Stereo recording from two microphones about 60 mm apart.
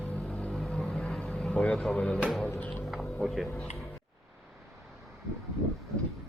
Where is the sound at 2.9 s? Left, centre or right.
Centre.